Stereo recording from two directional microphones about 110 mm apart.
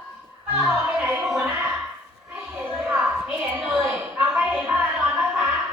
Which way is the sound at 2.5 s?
15° right (ahead or behind).